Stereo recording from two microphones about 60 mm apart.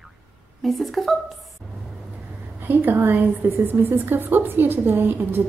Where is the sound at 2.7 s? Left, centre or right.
Right.